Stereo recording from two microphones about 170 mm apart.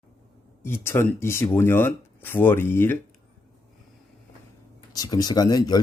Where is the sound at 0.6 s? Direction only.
15° left (ahead or behind).